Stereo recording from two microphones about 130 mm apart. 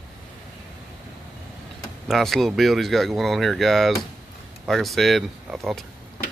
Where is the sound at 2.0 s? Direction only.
Centre (ahead or behind).